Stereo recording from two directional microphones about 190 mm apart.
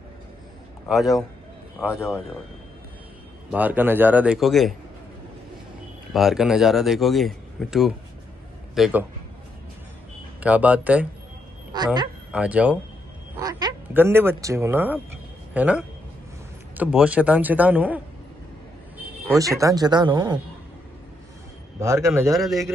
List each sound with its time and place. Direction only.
0.8 s speech: centre (ahead or behind)
1.9 s speech: 15° left (ahead or behind)
3.5 s a man's voice: 10° right (ahead or behind)
6.1 s a man's voice: centre (ahead or behind)
10.4 s a man's voice: 5° right (ahead or behind)
11.7 s speech: 20° right (ahead or behind)
12.3 s speech: 5° right (ahead or behind)
13.4 s quack: 20° right (ahead or behind)
13.9 s a man's voice: 10° right (ahead or behind)
19.3 s speech: 15° right (ahead or behind)
21.7 s a man's voice: 15° right (ahead or behind)